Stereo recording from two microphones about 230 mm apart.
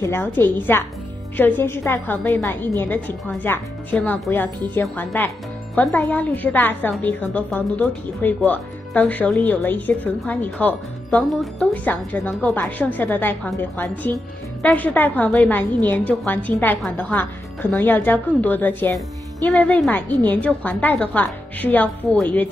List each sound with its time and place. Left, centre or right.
0.0 s a woman's voice: centre